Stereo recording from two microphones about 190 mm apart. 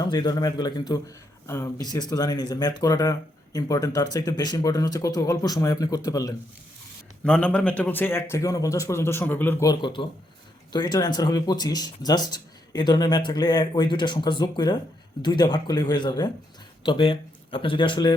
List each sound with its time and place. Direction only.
0.0 s speech: 20° left (ahead or behind)
7.3 s a man's voice: 5° left (ahead or behind); by 18.1 s 25° left (ahead or behind)